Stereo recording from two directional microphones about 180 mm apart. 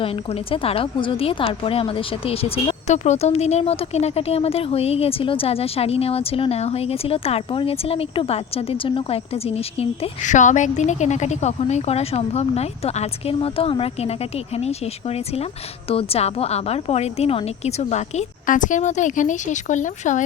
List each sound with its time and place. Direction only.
0.0 s a woman's voice: 30° left (ahead or behind)